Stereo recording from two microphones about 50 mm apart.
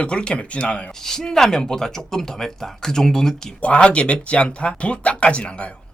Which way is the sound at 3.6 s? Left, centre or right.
Left.